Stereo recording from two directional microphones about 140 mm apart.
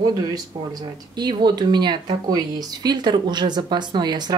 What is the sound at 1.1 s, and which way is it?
Speech, 30° right (ahead or behind).